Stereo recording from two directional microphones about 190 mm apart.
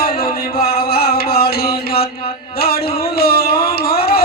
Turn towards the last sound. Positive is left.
turn(degrees=55)  # may be behind; listen again after turning